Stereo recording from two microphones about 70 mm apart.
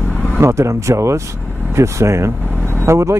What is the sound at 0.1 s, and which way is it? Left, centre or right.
Vehicle, centre.